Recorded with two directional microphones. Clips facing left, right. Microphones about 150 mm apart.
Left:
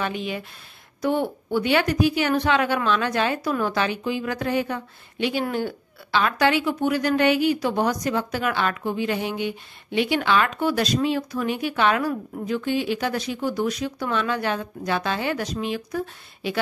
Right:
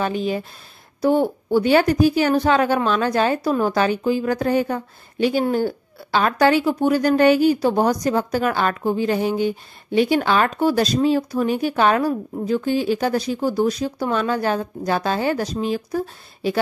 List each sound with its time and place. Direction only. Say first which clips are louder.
0.0 s a woman's voice: right 6 dB; 35° right (ahead or behind)